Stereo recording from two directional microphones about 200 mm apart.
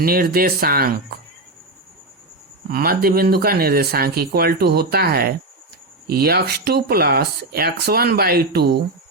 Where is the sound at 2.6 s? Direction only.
50° right (ahead or behind).